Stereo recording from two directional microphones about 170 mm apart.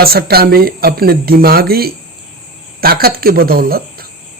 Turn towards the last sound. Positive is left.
turn(degrees=-60)  # may be behind; listen again after turning